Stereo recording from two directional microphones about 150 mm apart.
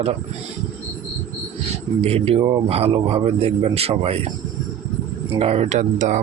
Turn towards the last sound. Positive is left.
turn(degrees=-55)  # may be behind; listen again after turning